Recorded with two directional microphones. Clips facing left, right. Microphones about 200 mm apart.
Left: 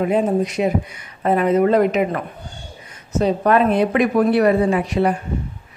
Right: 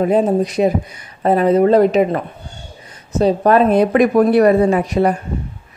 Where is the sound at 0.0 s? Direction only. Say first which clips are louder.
Right 3 dB; 35° right (ahead or behind).